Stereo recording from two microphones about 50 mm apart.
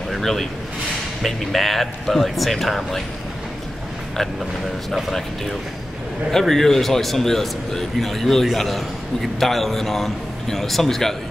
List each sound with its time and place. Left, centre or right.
0.1 s a sound: centre
1.2 s a man's voice: centre
6.3 s a man's voice: centre